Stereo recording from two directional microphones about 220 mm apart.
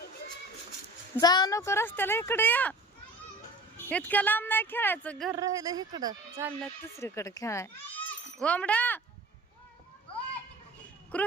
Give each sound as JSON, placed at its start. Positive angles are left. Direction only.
{"t": 1.1, "sound": "speech", "side_deg": 20}
{"t": 3.8, "sound": "speech", "side_deg": 5}
{"t": 5.3, "sound": "speech", "side_deg": -15}
{"t": 6.8, "sound": "speech", "side_deg": 15}
{"t": 11.1, "sound": "speech", "side_deg": 5}